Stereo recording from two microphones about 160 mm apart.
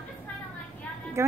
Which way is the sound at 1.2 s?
15° right (ahead or behind).